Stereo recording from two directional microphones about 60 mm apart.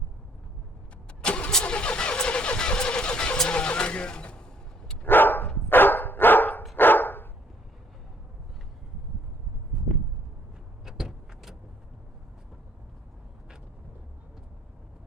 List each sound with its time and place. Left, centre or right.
1.2 s vehicle: centre
5.0 s dog: left
10.8 s vehicle: centre